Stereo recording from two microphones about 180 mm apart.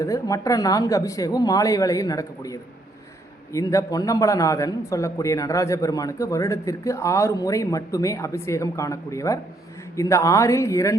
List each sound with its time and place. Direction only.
0.0 s a man's voice: 20° left (ahead or behind)